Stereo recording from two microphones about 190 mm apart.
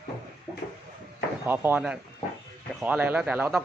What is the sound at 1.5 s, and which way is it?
A man's voice, 10° right (ahead or behind).